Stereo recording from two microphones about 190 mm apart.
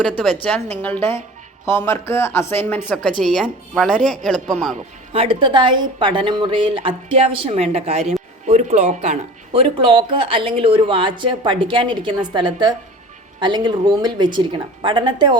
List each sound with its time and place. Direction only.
0.0 s speech: 5° left (ahead or behind)
5.1 s speech: 30° right (ahead or behind)